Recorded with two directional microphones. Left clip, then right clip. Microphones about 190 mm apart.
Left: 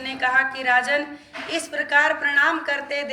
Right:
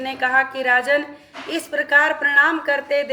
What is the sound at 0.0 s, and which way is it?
A woman's voice, 65° right (ahead or behind).